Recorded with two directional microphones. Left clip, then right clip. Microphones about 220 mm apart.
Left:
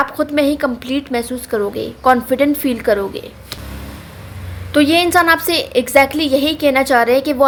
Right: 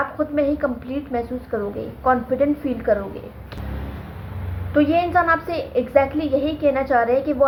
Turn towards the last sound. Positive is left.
turn(degrees=55)  # may be behind; listen again after turning